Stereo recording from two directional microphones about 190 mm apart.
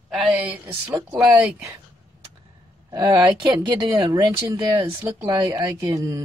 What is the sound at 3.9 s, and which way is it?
Speech, 20° right (ahead or behind).